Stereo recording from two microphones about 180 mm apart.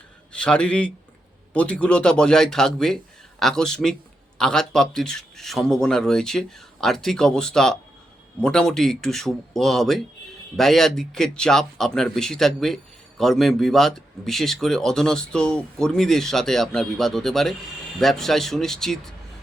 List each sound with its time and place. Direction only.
0.3 s speech: 5° left (ahead or behind)